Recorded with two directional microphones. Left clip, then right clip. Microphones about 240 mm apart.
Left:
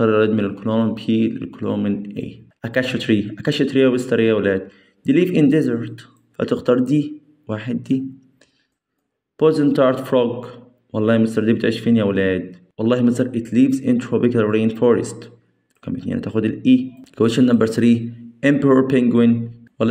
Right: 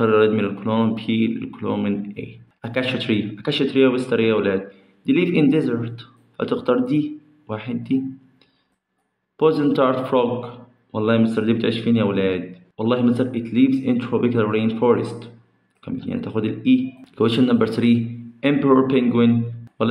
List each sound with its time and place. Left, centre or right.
0.0 s speech: left
9.4 s a man's voice: left